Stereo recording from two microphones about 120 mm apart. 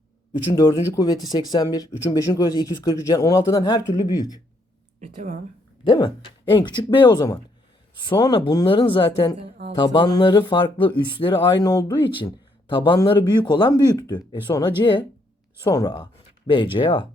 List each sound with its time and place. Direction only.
0.5 s speech: 30° left (ahead or behind)
4.9 s speech: 75° right (ahead or behind)
5.8 s speech: 40° left (ahead or behind)
15.7 s speech: 35° left (ahead or behind)